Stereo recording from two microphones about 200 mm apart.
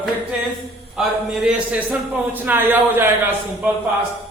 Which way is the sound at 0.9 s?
5° right (ahead or behind).